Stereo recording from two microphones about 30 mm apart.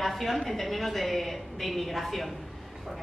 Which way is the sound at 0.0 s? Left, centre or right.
Centre.